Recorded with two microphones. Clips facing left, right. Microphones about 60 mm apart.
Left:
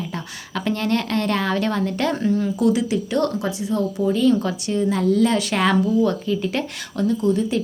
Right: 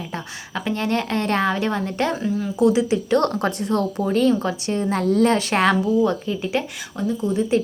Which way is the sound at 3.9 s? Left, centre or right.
Right.